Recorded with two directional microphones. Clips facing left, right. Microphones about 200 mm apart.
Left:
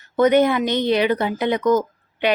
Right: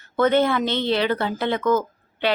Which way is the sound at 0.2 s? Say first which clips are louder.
Left 3 dB; 15° left (ahead or behind).